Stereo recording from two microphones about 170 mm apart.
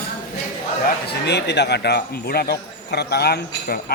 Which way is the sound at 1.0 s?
80° left.